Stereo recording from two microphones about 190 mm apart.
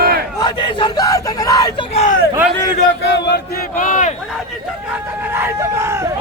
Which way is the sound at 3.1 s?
60° left (ahead or behind).